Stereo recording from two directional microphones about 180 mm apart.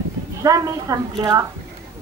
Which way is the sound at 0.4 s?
20° right (ahead or behind).